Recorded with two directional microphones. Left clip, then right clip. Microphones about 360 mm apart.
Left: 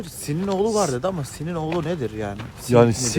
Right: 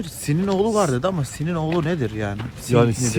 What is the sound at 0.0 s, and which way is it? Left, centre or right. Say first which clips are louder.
Speech: right 3 dB; right.